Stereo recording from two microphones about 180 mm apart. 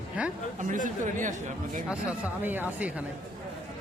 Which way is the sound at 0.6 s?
45° right (ahead or behind).